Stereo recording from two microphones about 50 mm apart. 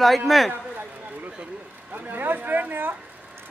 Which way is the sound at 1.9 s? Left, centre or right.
Right.